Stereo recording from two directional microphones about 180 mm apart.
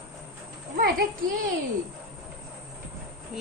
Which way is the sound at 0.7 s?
60° right (ahead or behind).